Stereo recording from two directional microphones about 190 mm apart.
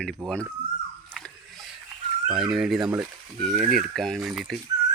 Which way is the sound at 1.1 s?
Centre (ahead or behind).